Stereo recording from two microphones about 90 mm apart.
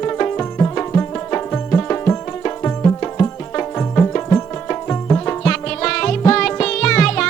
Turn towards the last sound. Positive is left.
turn(degrees=10)  # may be behind; listen again after turning